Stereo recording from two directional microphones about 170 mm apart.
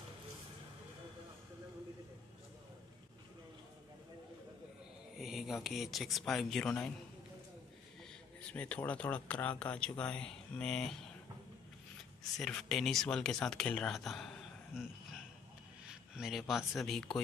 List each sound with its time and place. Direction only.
5.2 s speech: centre (ahead or behind)
8.5 s speech: 5° left (ahead or behind)
12.4 s speech: 5° left (ahead or behind)
15.9 s speech: 5° right (ahead or behind)